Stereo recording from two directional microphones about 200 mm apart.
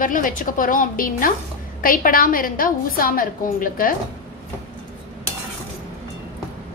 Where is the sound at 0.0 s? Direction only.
40° left (ahead or behind).